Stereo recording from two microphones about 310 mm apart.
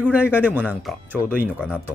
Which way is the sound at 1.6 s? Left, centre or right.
Centre.